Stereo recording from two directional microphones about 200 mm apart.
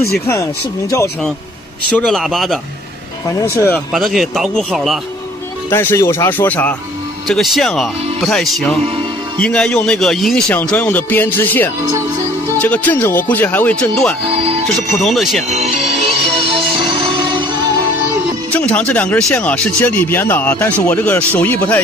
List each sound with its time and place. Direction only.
0.3 s speech: 15° left (ahead or behind)
2.0 s speech: centre (ahead or behind)
3.5 s speech: 10° left (ahead or behind)
5.7 s speech: 10° left (ahead or behind)
14.3 s speech: 30° right (ahead or behind)
15.0 s speech: centre (ahead or behind)
15.5 s music: 35° right (ahead or behind)
18.5 s speech: 5° left (ahead or behind)